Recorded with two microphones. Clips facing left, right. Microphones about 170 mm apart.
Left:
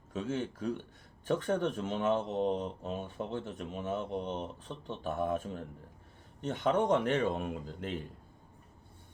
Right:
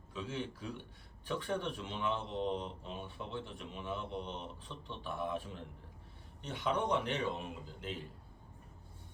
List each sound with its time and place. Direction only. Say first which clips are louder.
0.1 s speech: left 6 dB; 45° left (ahead or behind)